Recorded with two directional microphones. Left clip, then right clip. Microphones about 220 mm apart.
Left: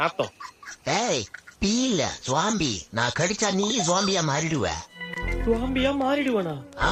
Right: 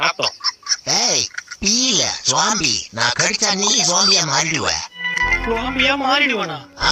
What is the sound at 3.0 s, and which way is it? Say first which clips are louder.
Speech: right 6 dB; 25° right (ahead or behind).